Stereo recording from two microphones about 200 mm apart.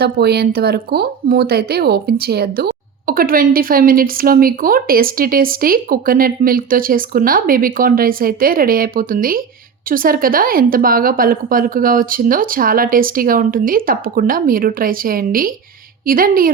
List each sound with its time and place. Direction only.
0.0 s speech: 55° right (ahead or behind)